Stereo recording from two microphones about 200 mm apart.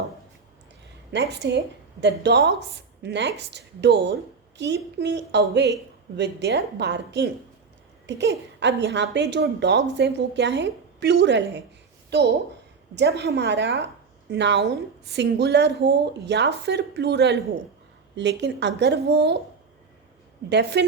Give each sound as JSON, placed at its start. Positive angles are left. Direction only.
{"t": 1.1, "sound": "a woman's voice", "side_deg": -60}
{"t": 20.5, "sound": "a woman's voice", "side_deg": -55}